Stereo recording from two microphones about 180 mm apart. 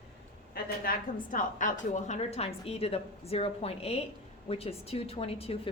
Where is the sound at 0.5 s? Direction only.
50° left (ahead or behind).